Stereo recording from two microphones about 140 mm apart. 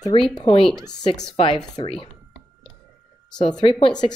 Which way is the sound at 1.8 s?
40° left (ahead or behind).